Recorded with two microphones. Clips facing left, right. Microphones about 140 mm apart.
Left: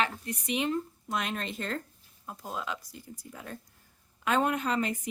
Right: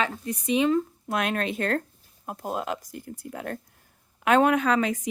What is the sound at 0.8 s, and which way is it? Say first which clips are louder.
A woman's voice: right 6 dB; 65° right (ahead or behind).